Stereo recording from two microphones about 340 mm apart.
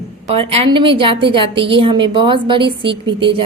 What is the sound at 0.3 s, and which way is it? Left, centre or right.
A woman's voice, centre.